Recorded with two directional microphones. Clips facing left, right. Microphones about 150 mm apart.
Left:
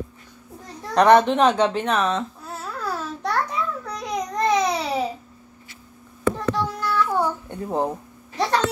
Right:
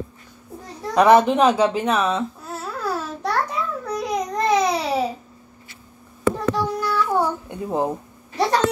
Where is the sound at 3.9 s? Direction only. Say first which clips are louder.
Right 5 dB; centre (ahead or behind).